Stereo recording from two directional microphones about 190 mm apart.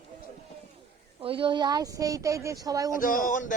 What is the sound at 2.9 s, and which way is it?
Speech, 45° left (ahead or behind).